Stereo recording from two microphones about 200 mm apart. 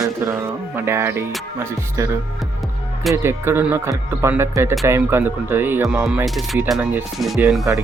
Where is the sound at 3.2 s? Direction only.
10° right (ahead or behind).